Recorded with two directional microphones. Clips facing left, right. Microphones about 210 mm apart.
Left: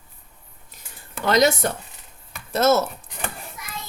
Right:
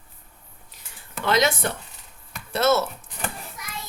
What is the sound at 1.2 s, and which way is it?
Speech, 40° left (ahead or behind).